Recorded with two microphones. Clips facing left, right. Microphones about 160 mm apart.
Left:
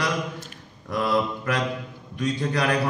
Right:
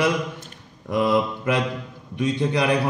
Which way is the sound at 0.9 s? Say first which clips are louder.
Right 3 dB; 20° right (ahead or behind).